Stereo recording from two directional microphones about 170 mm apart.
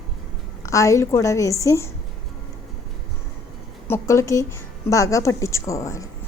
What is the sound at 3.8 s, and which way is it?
A woman's voice, 15° left (ahead or behind).